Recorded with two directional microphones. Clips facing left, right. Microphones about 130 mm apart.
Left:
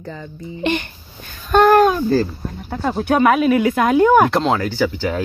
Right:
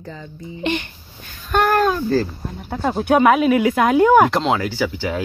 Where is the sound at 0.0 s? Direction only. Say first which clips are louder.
Left 3 dB; 55° left (ahead or behind).